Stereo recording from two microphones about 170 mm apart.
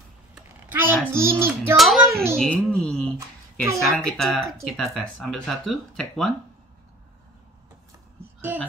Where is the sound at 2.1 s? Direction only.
15° right (ahead or behind).